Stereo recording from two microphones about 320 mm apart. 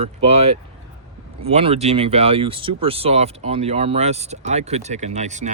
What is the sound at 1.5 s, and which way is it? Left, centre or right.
Speech, centre.